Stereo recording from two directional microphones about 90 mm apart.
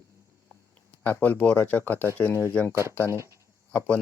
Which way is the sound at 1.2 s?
20° left (ahead or behind).